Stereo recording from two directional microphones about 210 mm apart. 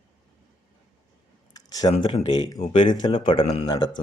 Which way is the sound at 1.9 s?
30° left (ahead or behind).